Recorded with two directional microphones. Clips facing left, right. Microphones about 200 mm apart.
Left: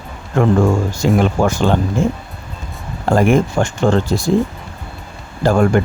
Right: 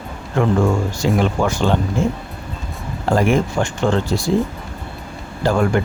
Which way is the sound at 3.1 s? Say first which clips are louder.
Left 3 dB; 45° left (ahead or behind).